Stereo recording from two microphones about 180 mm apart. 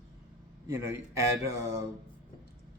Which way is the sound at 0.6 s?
15° right (ahead or behind).